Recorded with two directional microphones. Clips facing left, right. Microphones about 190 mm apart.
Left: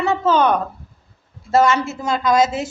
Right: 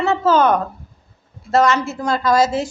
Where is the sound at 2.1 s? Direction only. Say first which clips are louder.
Even; 20° left (ahead or behind).